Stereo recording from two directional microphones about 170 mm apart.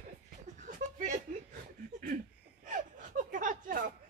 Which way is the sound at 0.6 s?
50° right (ahead or behind).